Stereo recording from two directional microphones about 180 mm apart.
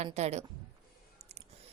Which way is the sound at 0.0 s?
40° right (ahead or behind).